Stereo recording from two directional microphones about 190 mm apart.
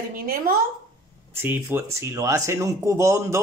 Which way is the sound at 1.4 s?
10° right (ahead or behind).